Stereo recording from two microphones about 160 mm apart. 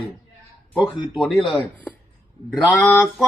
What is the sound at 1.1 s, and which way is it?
Speech, centre (ahead or behind).